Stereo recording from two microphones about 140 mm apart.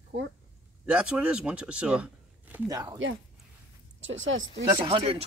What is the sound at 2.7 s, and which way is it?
Speech, 25° right (ahead or behind).